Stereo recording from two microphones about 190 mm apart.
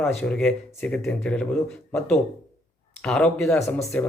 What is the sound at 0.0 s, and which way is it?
Speech, 5° left (ahead or behind).